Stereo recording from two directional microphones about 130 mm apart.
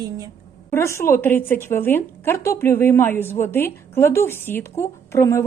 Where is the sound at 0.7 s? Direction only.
20° left (ahead or behind).